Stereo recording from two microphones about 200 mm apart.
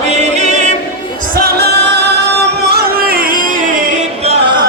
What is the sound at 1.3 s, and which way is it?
Music, 50° right (ahead or behind).